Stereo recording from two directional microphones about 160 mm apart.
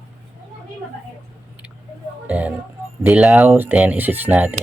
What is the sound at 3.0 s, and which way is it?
Speech, 5° right (ahead or behind).